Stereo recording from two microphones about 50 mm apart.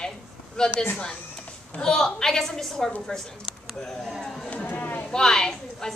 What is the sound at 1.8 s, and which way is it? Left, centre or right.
A woman's voice, centre.